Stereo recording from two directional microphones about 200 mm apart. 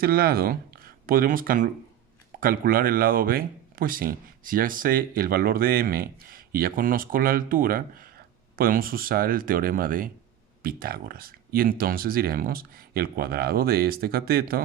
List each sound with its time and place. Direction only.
0.0 s speech: 50° right (ahead or behind)